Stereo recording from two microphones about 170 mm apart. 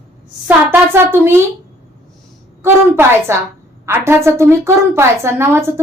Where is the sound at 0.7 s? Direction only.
15° right (ahead or behind).